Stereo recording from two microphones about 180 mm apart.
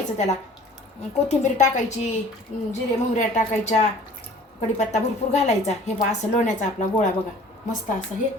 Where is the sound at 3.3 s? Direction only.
40° left (ahead or behind).